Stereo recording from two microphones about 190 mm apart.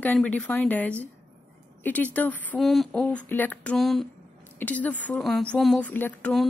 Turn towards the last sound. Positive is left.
turn(degrees=5)  # may be behind; listen again after turning